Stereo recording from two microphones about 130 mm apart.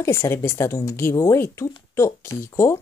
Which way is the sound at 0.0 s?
20° left (ahead or behind).